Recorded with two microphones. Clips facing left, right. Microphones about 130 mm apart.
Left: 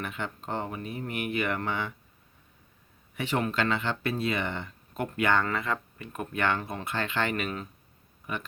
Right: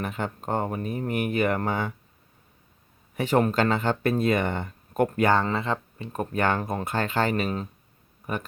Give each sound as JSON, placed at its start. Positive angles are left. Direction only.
{"t": 0.0, "sound": "speech", "side_deg": -40}
{"t": 3.2, "sound": "speech", "side_deg": -40}